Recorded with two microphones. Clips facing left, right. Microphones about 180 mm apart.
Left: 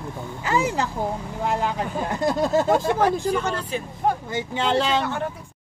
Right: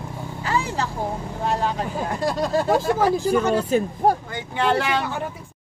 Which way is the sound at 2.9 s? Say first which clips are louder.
Right 2 dB; 10° right (ahead or behind).